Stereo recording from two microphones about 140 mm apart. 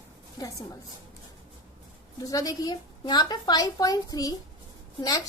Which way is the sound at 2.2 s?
25° left (ahead or behind).